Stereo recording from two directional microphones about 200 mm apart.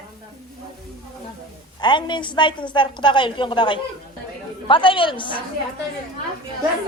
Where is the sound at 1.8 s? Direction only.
20° left (ahead or behind).